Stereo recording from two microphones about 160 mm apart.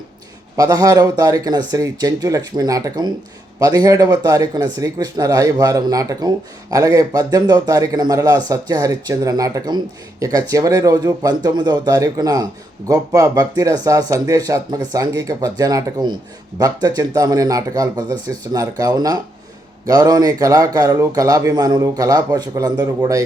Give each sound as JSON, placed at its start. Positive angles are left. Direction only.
{"t": 0.5, "sound": "speech", "side_deg": -20}